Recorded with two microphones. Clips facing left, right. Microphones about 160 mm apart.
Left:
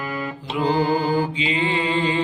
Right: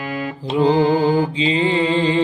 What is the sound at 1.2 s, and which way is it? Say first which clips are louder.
Mantra: right 4 dB; 30° right (ahead or behind).